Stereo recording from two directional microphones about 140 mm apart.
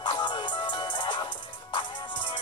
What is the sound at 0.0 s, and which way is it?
Music, 35° left (ahead or behind).